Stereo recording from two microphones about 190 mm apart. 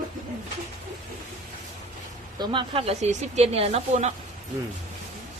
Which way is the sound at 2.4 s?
25° right (ahead or behind).